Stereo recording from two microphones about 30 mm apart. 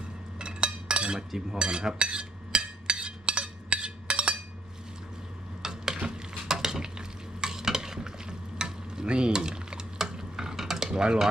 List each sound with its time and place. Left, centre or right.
0.3 s dishes: right
1.5 s speech: right
2.0 s a sound: right
5.6 s stir: centre
9.0 s dishes: right
10.6 s cutlery: centre
10.8 s a sound: right